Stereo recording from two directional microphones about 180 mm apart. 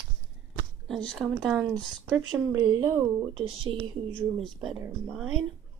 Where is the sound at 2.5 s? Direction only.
20° right (ahead or behind).